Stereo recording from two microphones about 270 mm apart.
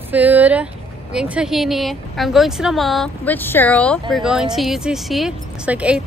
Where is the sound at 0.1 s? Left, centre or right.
Centre.